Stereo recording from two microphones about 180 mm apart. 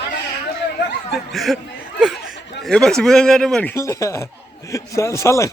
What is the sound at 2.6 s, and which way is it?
Speech, 5° left (ahead or behind).